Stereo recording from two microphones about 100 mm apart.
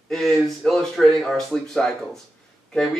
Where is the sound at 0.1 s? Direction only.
Centre (ahead or behind).